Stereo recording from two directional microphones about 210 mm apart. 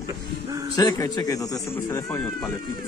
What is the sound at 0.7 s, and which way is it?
A man's voice, 15° left (ahead or behind).